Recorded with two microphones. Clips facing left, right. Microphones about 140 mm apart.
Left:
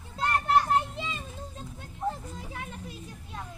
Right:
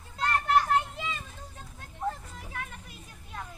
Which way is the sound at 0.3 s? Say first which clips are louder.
Left 1 dB; 20° left (ahead or behind).